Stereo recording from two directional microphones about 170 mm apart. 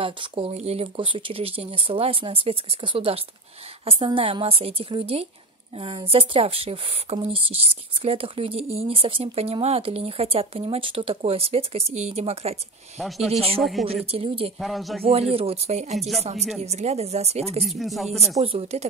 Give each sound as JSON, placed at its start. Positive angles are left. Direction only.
{"t": 0.0, "sound": "speech", "side_deg": -30}
{"t": 13.6, "sound": "speech", "side_deg": 0}
{"t": 14.1, "sound": "speech", "side_deg": -35}
{"t": 14.6, "sound": "speech", "side_deg": 0}
{"t": 15.3, "sound": "speech", "side_deg": -35}
{"t": 17.6, "sound": "speech", "side_deg": 0}
{"t": 18.4, "sound": "speech", "side_deg": -35}